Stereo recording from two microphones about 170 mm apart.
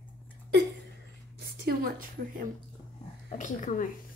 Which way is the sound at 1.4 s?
60° right (ahead or behind).